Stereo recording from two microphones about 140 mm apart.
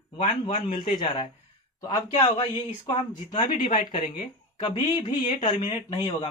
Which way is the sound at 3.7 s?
90° left.